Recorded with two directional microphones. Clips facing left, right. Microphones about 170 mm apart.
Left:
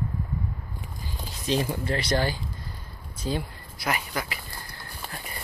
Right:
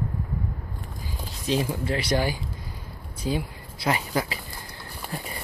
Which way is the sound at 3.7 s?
25° right (ahead or behind).